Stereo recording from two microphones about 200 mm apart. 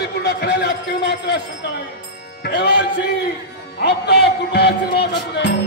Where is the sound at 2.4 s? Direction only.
60° left (ahead or behind).